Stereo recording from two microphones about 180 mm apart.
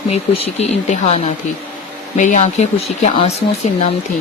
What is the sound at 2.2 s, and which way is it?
Speech, 40° left (ahead or behind).